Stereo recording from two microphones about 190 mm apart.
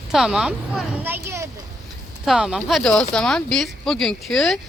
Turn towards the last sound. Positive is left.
turn(degrees=0)  # may be behind; listen again after turning